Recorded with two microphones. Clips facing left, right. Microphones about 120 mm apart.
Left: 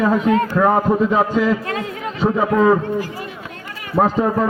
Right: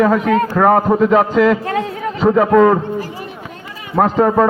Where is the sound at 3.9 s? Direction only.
70° right (ahead or behind).